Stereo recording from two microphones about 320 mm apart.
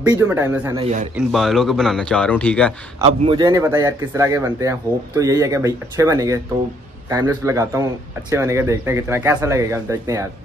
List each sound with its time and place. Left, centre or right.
0.0 s speech: centre
0.7 s a man's voice: centre
1.1 s a man's voice: centre
3.0 s speech: centre